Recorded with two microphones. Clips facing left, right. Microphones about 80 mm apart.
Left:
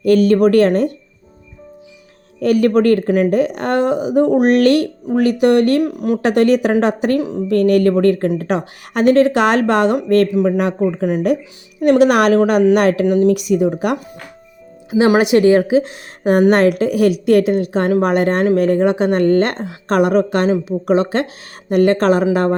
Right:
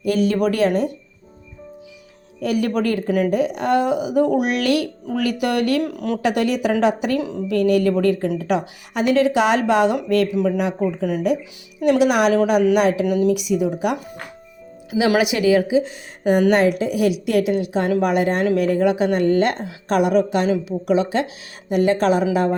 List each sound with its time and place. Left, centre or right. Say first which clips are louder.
0.0 s speech: left 7 dB; left
0.6 s speech: left 4 dB; left
2.4 s speech: left 7 dB; left
5.2 s speech: left 8 dB; left
5.8 s speech: left 6 dB; left
6.2 s speech: left 6 dB; left
7.2 s speech: left 5 dB; left
7.5 s speech: left 4 dB; left